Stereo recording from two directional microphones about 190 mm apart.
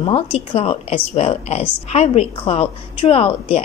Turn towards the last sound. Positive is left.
turn(degrees=30)  # may be behind; listen again after turning